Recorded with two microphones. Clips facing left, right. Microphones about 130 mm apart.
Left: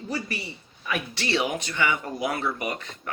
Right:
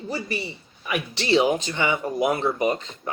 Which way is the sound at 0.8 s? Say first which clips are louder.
Right 3 dB; 15° right (ahead or behind).